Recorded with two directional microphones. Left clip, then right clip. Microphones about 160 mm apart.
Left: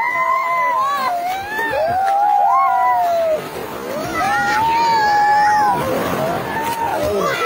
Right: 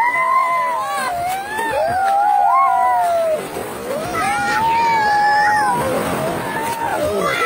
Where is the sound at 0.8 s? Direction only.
40° right (ahead or behind).